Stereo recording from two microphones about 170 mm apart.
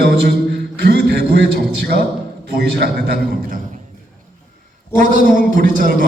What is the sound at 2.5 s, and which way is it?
A man's voice, 65° right (ahead or behind).